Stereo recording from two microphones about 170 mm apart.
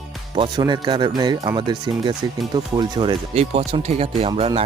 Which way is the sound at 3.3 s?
40° right (ahead or behind).